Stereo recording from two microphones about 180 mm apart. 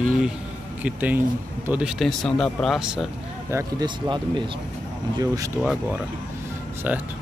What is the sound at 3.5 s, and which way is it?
Speech, 25° right (ahead or behind).